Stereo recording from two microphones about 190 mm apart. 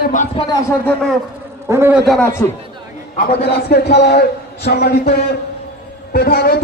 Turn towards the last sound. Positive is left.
turn(degrees=55)  # may be behind; listen again after turning